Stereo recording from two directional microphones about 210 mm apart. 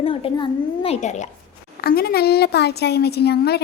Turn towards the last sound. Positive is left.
turn(degrees=50)  # may be behind; listen again after turning